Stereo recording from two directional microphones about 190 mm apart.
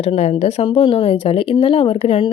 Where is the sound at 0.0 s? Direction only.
35° left (ahead or behind).